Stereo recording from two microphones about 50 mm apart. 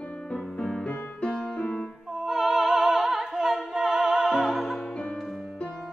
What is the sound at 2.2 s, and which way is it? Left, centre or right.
Music, centre.